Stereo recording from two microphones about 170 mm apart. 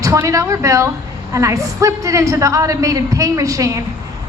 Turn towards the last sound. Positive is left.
turn(degrees=-20)  # may be behind; listen again after turning